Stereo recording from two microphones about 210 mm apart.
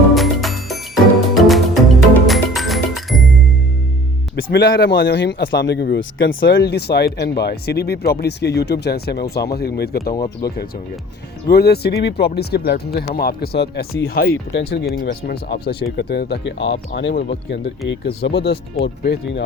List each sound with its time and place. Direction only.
0.1 s music: centre (ahead or behind)
4.4 s speech: 55° left (ahead or behind)
11.4 s speech: 50° left (ahead or behind)